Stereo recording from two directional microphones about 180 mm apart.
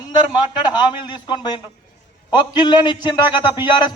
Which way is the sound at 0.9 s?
25° left (ahead or behind).